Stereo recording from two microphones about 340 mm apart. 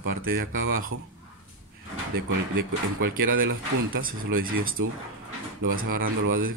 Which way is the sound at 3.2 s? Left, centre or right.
Right.